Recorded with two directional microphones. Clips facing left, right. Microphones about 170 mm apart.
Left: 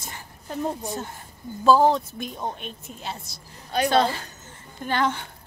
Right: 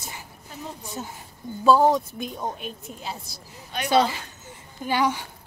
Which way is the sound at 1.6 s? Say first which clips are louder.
Even; centre (ahead or behind).